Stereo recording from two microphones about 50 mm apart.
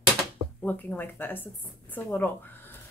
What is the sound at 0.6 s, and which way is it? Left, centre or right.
Speech, left.